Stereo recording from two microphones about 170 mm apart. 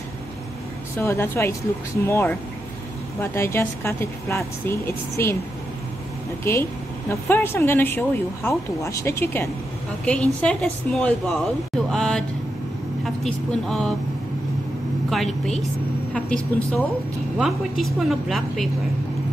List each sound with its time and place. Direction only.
0.9 s speech: 15° left (ahead or behind)
6.5 s a woman's voice: 15° left (ahead or behind)
15.0 s a woman's voice: centre (ahead or behind)